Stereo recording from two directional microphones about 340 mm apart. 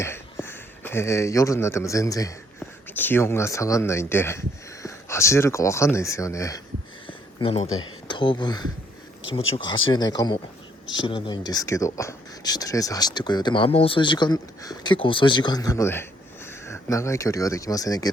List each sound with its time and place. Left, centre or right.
0.0 s speech: centre
7.1 s a sound: centre
8.0 s speech: centre